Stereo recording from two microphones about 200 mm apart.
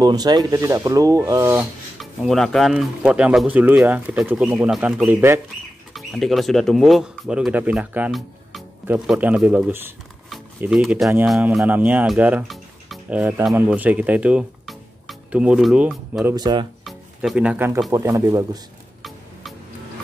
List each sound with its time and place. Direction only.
0.0 s speech: 20° right (ahead or behind)
2.0 s speech: centre (ahead or behind)
16.3 s speech: 20° right (ahead or behind)
16.8 s speech: centre (ahead or behind); by 18.6 s 15° right (ahead or behind)